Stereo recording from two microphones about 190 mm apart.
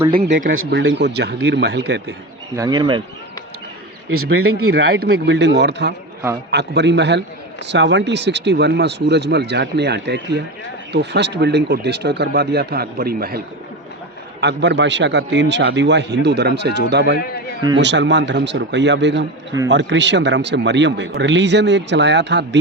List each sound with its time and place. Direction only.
0.5 s a man's voice: 80° right; by 2.1 s 60° right (ahead or behind)
2.6 s speech: 20° right (ahead or behind)
4.5 s a man's voice: 55° right (ahead or behind)
14.4 s a man's voice: 65° right (ahead or behind)